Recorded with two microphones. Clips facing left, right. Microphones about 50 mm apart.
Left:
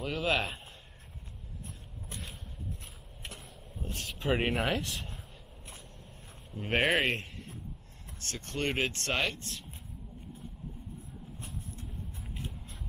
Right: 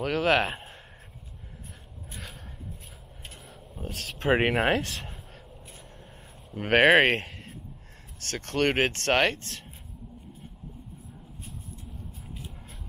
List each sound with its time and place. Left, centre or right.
0.0 s speech: right
3.8 s a sound: right
4.2 s speech: right
6.5 s speech: right